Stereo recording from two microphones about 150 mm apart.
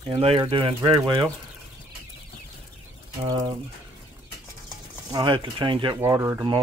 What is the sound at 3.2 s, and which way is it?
Speech, 25° right (ahead or behind).